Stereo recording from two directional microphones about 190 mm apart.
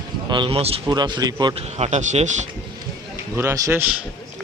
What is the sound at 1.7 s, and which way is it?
Speech, 35° right (ahead or behind).